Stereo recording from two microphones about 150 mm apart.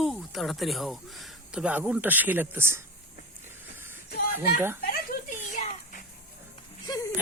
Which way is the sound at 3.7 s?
15° right (ahead or behind).